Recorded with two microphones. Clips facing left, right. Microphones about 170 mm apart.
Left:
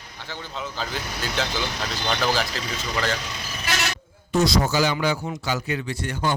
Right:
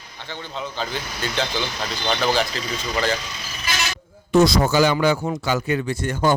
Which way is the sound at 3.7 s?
65° left (ahead or behind).